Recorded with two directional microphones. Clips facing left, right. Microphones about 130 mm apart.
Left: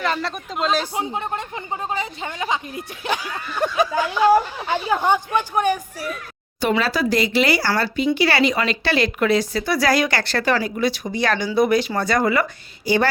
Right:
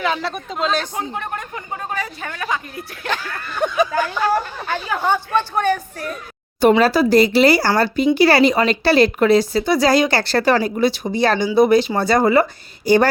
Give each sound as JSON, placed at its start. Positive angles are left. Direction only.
{"t": 0.0, "sound": "speech", "side_deg": 0}
{"t": 4.2, "sound": "speech", "side_deg": 15}
{"t": 6.6, "sound": "speech", "side_deg": -45}
{"t": 12.8, "sound": "a woman's voice", "side_deg": -45}